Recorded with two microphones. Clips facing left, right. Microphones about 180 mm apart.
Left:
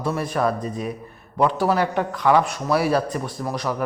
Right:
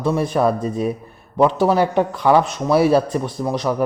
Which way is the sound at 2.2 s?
30° right (ahead or behind).